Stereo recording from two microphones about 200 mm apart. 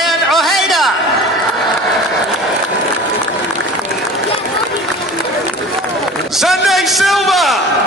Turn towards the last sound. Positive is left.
turn(degrees=0)  # may be behind; listen again after turning